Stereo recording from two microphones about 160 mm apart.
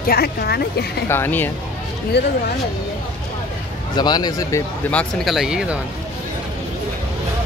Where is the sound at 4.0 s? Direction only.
25° left (ahead or behind).